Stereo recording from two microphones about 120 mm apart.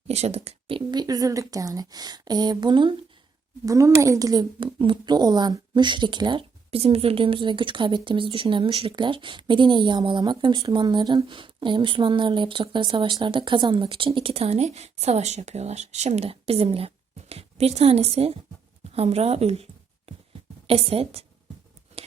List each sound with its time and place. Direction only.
0.1 s speech: 65° right (ahead or behind)
0.9 s a woman's voice: 35° right (ahead or behind)
3.7 s a woman's voice: 25° right (ahead or behind); by 19.6 s 60° right (ahead or behind)
20.7 s speech: 55° right (ahead or behind)
21.9 s a sound: 65° right (ahead or behind)